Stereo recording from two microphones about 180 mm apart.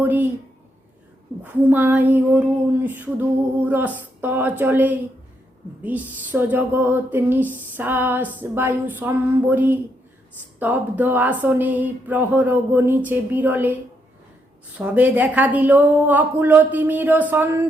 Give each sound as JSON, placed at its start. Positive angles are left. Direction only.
{"t": 0.0, "sound": "a sound", "side_deg": -10}
{"t": 1.3, "sound": "speech", "side_deg": -15}
{"t": 14.8, "sound": "speech", "side_deg": -10}